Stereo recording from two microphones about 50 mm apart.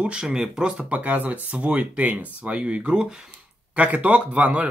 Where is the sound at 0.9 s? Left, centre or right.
Right; by 3.3 s centre.